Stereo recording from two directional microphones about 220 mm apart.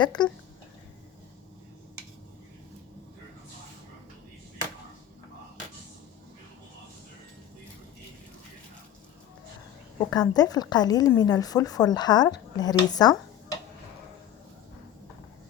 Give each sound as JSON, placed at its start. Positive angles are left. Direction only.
{"t": 0.0, "sound": "speech", "side_deg": 20}
{"t": 10.1, "sound": "a woman's voice", "side_deg": 15}